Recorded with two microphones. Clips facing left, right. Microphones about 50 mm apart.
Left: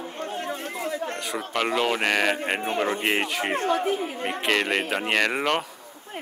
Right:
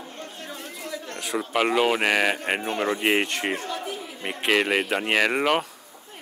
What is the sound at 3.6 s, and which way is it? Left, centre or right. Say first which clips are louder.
Speech: left 8 dB; left.